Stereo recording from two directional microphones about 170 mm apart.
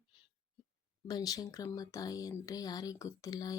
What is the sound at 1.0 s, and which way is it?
Speech, 20° left (ahead or behind).